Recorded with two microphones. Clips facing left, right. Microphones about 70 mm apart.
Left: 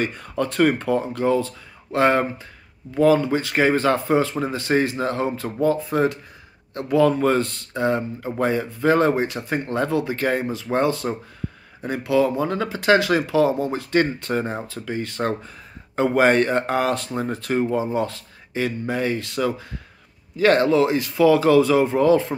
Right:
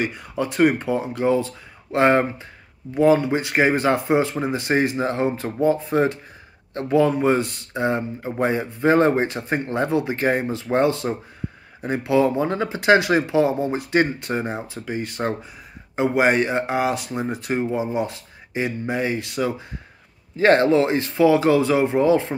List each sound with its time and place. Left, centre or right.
0.0 s speech: centre